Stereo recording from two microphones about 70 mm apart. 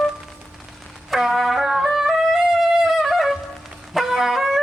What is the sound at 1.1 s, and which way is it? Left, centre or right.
Wind instrument, centre.